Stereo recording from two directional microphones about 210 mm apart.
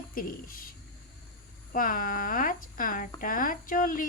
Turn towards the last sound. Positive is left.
turn(degrees=40)  # may be behind; listen again after turning